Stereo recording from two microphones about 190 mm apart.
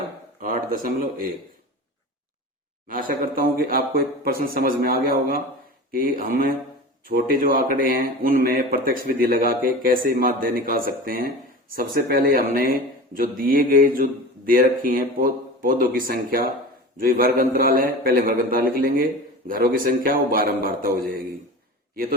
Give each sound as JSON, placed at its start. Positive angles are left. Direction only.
{"t": 0.4, "sound": "speech", "side_deg": -45}
{"t": 2.8, "sound": "speech", "side_deg": -45}